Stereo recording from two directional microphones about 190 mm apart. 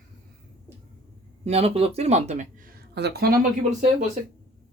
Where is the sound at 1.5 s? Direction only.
35° right (ahead or behind).